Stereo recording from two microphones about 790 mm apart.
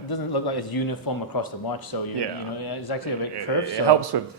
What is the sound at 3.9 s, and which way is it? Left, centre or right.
Speech, right.